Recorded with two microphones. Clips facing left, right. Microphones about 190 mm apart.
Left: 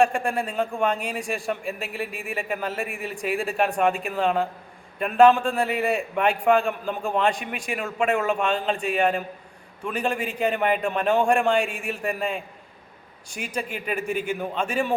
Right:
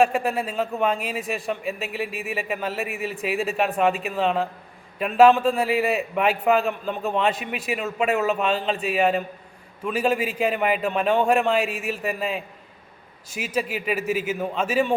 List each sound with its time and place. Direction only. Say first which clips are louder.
0.0 s a man's voice: right 1 dB; 5° right (ahead or behind)